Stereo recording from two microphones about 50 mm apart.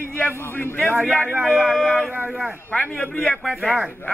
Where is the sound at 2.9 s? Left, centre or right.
Left.